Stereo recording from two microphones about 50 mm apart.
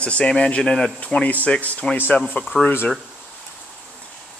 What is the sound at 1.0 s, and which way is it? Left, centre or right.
Speech, left.